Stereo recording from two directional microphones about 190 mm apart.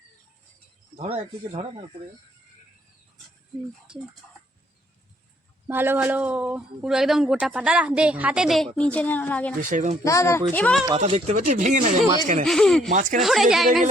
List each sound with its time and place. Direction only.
0.9 s speech: 30° right (ahead or behind)
5.6 s speech: 10° right (ahead or behind); by 9.6 s 10° left (ahead or behind)
9.6 s speech: 45° right (ahead or behind)
10.0 s speech: 15° left (ahead or behind)
10.9 s speech: 35° right (ahead or behind)
12.5 s speech: centre (ahead or behind)
12.9 s speech: 45° right (ahead or behind)
13.1 s speech: centre (ahead or behind)